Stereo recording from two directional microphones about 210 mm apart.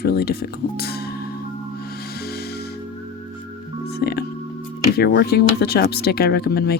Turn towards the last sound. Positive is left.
turn(degrees=50)  # may be behind; listen again after turning